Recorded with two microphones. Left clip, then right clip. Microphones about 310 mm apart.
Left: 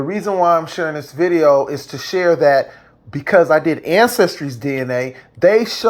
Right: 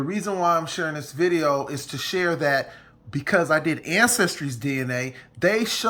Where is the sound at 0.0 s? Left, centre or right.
Centre.